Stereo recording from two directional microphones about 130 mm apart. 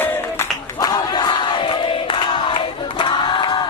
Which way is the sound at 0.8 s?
35° left (ahead or behind).